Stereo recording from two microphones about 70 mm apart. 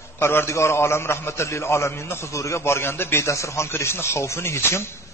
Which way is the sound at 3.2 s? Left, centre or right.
Left.